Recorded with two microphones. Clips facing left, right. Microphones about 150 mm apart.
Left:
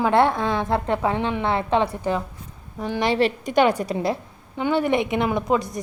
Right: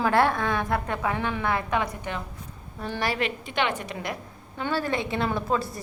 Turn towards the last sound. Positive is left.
turn(degrees=20)  # may be behind; listen again after turning